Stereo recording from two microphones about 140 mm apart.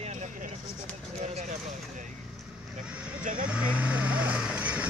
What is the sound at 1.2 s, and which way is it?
Vehicle, 60° right (ahead or behind).